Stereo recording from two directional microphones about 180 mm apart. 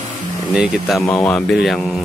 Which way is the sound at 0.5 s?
5° right (ahead or behind).